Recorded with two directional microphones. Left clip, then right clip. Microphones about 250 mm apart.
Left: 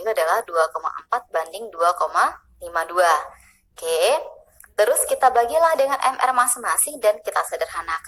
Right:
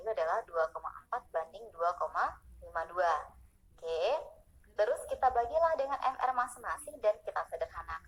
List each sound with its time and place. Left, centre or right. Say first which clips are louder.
0.0 s a woman's voice: left 13 dB; left